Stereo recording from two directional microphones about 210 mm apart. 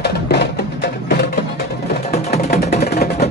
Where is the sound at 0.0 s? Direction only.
55° left (ahead or behind).